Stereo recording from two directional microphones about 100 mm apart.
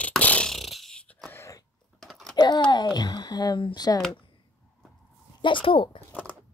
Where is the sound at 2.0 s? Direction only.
5° left (ahead or behind).